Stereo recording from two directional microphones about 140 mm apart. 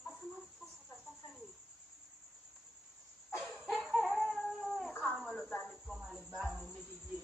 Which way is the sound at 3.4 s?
Centre (ahead or behind).